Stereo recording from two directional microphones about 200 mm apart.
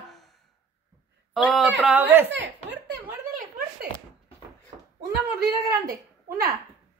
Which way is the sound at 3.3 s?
45° right (ahead or behind).